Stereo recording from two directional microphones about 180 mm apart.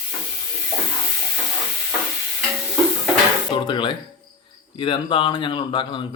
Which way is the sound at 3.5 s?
25° left (ahead or behind).